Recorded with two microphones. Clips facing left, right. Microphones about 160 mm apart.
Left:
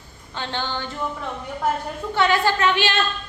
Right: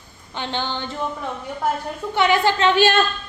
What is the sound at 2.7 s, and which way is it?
Speech, 45° right (ahead or behind).